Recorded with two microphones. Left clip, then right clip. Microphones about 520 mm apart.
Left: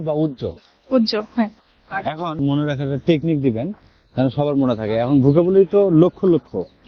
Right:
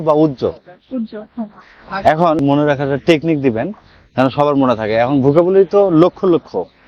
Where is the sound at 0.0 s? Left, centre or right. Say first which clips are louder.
Right 9 dB; centre.